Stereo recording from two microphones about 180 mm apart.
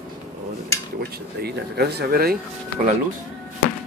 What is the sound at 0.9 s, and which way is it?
Speech, 65° right (ahead or behind).